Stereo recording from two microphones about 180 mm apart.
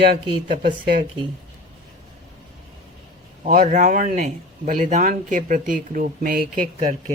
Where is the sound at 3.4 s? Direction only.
45° right (ahead or behind).